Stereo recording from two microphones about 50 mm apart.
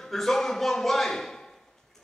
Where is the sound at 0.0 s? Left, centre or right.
Centre.